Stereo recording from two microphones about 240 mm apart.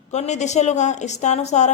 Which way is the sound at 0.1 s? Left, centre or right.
Left.